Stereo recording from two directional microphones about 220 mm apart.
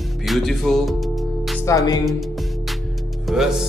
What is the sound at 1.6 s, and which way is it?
Speech, 15° left (ahead or behind).